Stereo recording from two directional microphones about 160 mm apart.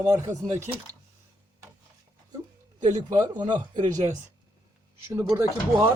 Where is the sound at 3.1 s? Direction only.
25° right (ahead or behind).